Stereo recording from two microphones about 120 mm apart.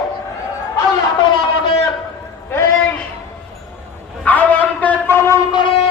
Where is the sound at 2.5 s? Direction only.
20° left (ahead or behind).